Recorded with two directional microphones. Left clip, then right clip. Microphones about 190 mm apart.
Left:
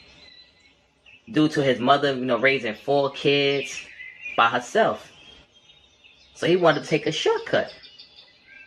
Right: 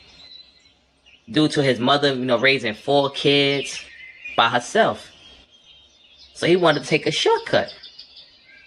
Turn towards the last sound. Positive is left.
turn(degrees=-40)  # may be behind; listen again after turning